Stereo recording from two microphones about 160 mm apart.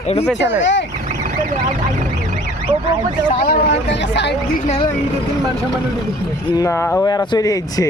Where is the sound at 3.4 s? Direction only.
75° left (ahead or behind).